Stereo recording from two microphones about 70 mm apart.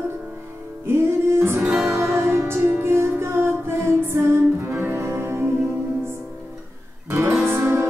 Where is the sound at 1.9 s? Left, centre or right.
Right.